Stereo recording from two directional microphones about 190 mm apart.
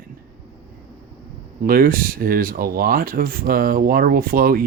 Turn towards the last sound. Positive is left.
turn(degrees=-50)  # may be behind; listen again after turning